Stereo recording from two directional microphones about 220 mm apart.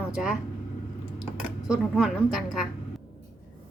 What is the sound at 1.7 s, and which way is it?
A woman's voice, 5° right (ahead or behind).